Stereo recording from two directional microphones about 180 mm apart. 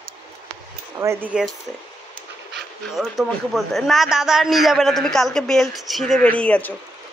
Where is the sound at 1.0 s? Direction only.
10° right (ahead or behind).